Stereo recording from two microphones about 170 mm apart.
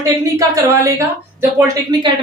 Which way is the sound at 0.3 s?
20° right (ahead or behind).